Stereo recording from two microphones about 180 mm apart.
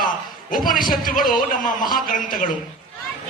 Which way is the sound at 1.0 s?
50° left (ahead or behind).